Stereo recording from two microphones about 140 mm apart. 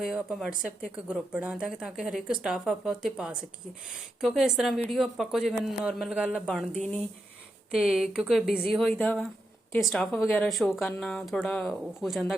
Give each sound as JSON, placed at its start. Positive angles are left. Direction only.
{"t": 0.0, "sound": "speech", "side_deg": -5}
{"t": 6.4, "sound": "speech", "side_deg": 5}
{"t": 7.7, "sound": "speech", "side_deg": -5}